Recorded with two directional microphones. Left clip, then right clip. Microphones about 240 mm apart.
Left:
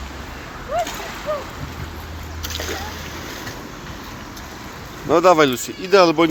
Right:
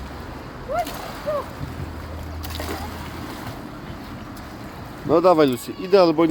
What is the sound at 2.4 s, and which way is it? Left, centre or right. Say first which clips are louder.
Splash: left 4 dB; right.